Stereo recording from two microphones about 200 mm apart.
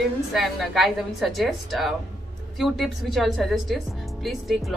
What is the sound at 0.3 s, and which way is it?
Speech, centre (ahead or behind).